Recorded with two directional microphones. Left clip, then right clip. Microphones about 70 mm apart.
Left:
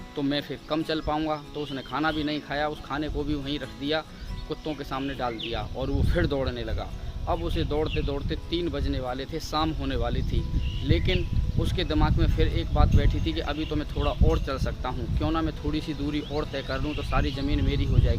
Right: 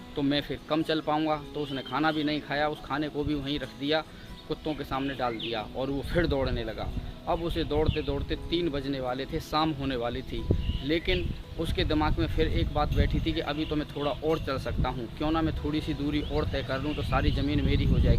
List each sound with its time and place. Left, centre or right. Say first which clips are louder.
0.2 s speech: even; centre